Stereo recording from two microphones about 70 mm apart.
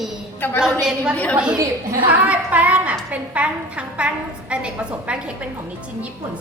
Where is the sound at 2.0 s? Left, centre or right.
Centre.